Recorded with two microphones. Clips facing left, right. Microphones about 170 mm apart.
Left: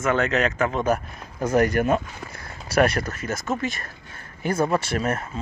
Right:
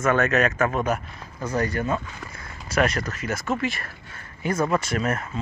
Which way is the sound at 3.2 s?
45° left (ahead or behind).